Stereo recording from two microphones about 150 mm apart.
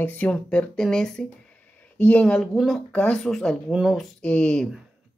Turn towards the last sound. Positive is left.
turn(degrees=5)  # may be behind; listen again after turning